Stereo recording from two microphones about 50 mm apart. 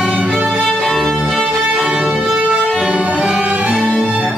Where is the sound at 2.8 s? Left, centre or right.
Right.